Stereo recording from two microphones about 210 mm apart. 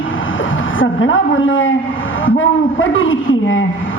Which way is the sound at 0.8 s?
65° left (ahead or behind).